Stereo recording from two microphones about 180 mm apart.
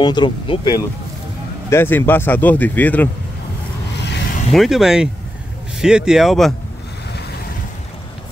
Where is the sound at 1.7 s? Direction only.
15° left (ahead or behind).